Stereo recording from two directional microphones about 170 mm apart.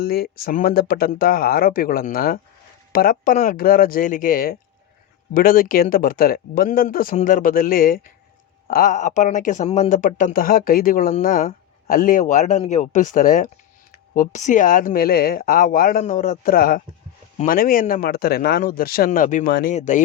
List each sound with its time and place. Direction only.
0.0 s speech: 60° left (ahead or behind); by 20.0 s 45° left (ahead or behind)